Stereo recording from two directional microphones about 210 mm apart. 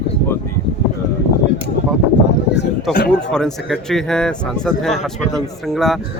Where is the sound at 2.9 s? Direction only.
Centre (ahead or behind).